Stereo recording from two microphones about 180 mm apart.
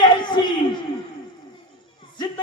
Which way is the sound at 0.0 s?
25° left (ahead or behind).